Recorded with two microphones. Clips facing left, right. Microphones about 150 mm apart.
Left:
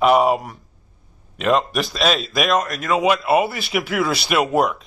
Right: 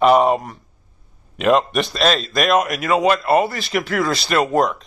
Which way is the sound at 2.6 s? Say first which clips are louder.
Right 2 dB; 10° right (ahead or behind).